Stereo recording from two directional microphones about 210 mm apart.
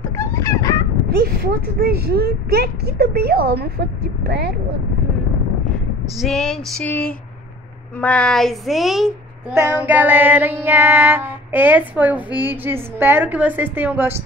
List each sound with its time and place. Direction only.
0.0 s a sound: 15° left (ahead or behind)
1.0 s speech: 50° right (ahead or behind)
6.0 s female singing: centre (ahead or behind)
9.5 s child singing: 10° right (ahead or behind)